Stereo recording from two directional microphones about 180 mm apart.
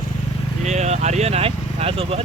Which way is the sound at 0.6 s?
40° right (ahead or behind).